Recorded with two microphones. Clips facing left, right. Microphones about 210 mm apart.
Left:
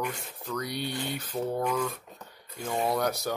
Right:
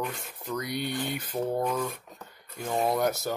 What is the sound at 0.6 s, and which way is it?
Speech, 50° right (ahead or behind).